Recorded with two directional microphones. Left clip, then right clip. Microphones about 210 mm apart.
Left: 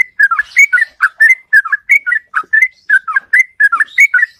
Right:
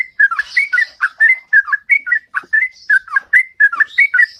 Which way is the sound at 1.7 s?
15° left (ahead or behind).